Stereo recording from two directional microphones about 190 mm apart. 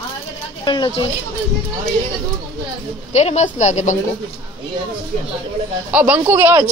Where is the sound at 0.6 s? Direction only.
25° left (ahead or behind).